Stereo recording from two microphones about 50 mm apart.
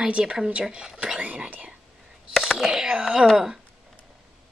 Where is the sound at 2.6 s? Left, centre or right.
Centre.